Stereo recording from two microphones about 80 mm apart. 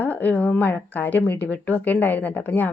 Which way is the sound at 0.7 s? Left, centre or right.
Left.